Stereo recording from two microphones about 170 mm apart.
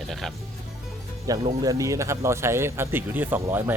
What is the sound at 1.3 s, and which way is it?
Speech, 20° right (ahead or behind).